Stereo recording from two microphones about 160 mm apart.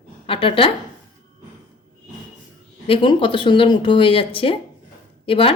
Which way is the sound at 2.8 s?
35° left (ahead or behind).